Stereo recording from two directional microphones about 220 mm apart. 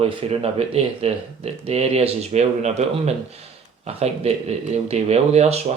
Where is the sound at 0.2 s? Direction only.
25° right (ahead or behind).